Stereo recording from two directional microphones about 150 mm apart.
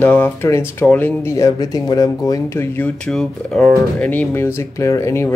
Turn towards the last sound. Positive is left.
turn(degrees=20)  # may be behind; listen again after turning